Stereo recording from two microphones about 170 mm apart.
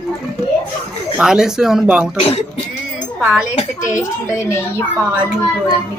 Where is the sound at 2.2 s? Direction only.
35° left (ahead or behind).